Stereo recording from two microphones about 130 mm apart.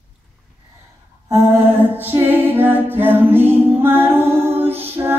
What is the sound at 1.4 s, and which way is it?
Music, 15° right (ahead or behind).